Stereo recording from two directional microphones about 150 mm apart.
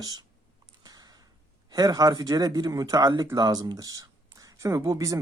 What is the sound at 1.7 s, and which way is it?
Speech, 25° right (ahead or behind).